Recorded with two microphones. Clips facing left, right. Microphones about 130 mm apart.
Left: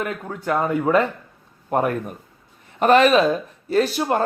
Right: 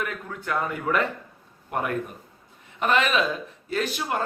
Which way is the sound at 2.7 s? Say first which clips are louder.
Left 8 dB; 45° left (ahead or behind).